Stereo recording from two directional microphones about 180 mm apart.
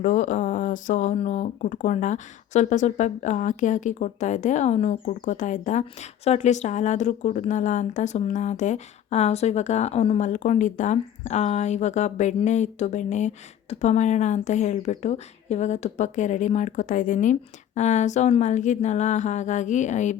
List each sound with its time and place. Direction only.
0.0 s speech: 45° left (ahead or behind)